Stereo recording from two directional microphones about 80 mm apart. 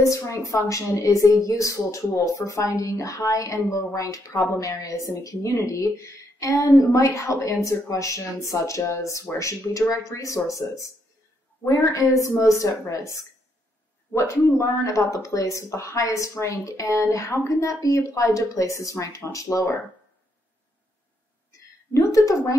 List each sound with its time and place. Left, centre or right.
0.0 s a woman's voice: left
14.1 s a woman's voice: left
21.5 s a sound: left